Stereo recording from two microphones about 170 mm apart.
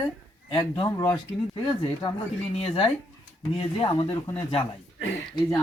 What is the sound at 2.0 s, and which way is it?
Speech, 30° left (ahead or behind).